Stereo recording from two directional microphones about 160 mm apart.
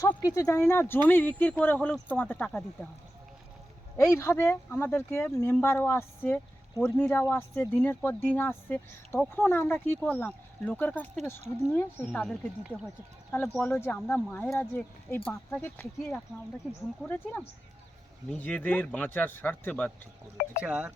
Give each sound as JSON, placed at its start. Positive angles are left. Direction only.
{"t": 0.0, "sound": "speech", "side_deg": 20}
{"t": 3.9, "sound": "speech", "side_deg": 15}
{"t": 13.6, "sound": "speech", "side_deg": 15}
{"t": 20.6, "sound": "speech", "side_deg": -10}